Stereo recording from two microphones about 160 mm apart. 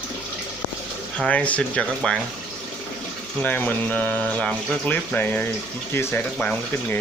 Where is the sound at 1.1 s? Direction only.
5° left (ahead or behind).